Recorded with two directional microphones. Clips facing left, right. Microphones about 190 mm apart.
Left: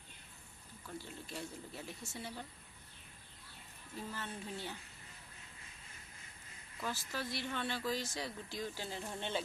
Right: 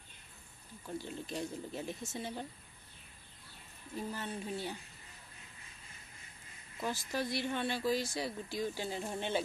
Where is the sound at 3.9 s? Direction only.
15° right (ahead or behind).